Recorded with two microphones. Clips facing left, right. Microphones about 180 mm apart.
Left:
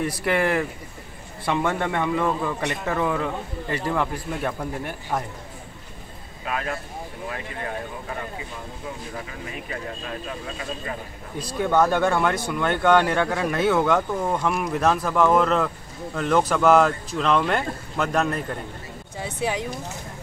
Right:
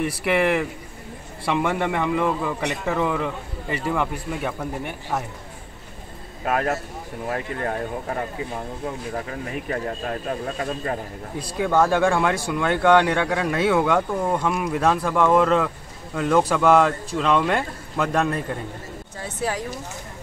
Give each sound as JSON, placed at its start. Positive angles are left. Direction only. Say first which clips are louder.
{"t": 0.0, "sound": "a man's voice", "louder": "right 2 dB", "side_deg": -5}
{"t": 6.4, "sound": "speech", "louder": "right 6 dB", "side_deg": -50}
{"t": 11.6, "sound": "a man's voice", "louder": "right 1 dB", "side_deg": -10}